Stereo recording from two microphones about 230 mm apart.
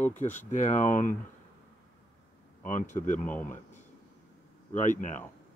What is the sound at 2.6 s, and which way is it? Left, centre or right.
Speech, left.